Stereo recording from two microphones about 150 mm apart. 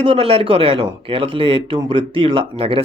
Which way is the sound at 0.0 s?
40° right (ahead or behind).